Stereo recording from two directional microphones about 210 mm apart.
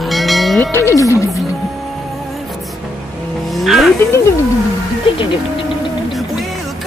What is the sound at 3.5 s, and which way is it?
Vehicle, centre (ahead or behind).